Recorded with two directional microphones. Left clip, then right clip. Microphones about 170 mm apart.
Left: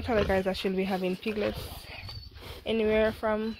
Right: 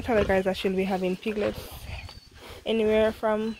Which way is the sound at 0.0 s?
20° right (ahead or behind).